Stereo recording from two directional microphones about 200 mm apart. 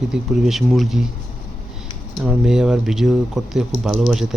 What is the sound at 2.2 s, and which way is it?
Speech, 5° right (ahead or behind).